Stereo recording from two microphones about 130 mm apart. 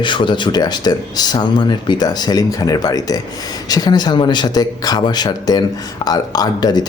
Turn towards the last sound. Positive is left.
turn(degrees=35)  # may be behind; listen again after turning